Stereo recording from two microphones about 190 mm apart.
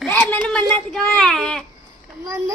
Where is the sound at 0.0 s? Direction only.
10° left (ahead or behind).